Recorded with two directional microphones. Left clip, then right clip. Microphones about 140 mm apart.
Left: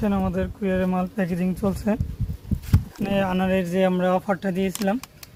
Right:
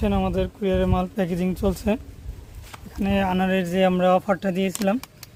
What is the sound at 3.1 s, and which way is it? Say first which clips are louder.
Speech: even; 20° right (ahead or behind).